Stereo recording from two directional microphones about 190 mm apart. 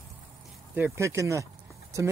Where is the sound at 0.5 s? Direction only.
10° right (ahead or behind).